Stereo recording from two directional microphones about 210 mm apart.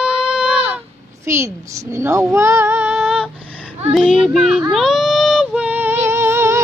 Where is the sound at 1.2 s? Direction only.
10° right (ahead or behind).